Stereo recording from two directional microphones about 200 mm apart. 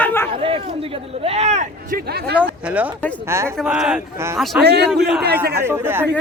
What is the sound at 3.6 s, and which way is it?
Speech, centre (ahead or behind).